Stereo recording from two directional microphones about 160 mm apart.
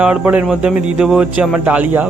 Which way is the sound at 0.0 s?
10° right (ahead or behind).